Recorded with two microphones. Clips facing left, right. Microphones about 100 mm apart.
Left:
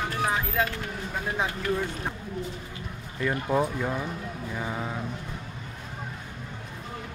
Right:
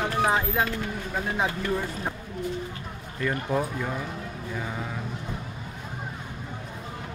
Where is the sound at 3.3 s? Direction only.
15° left (ahead or behind).